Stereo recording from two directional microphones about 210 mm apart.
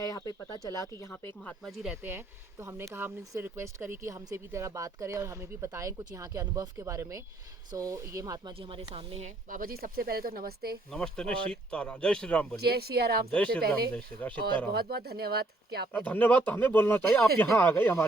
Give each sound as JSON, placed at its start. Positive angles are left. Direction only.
{"t": 0.0, "sound": "speech", "side_deg": 15}
{"t": 1.6, "sound": "speech", "side_deg": -5}
{"t": 10.9, "sound": "speech", "side_deg": 5}
{"t": 12.5, "sound": "speech", "side_deg": -50}
{"t": 13.3, "sound": "speech", "side_deg": 5}
{"t": 13.6, "sound": "speech", "side_deg": -45}
{"t": 13.9, "sound": "speech", "side_deg": 5}
{"t": 14.7, "sound": "speech", "side_deg": -50}
{"t": 15.9, "sound": "speech", "side_deg": 10}